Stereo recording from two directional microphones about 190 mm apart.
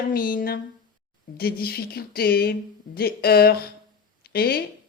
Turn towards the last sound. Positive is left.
turn(degrees=55)  # may be behind; listen again after turning